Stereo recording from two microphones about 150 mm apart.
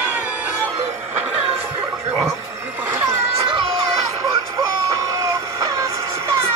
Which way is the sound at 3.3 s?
35° right (ahead or behind).